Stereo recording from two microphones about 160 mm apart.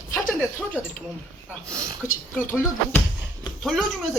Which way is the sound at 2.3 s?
10° left (ahead or behind).